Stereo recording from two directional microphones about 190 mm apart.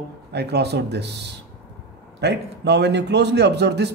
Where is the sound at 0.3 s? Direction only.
60° right (ahead or behind).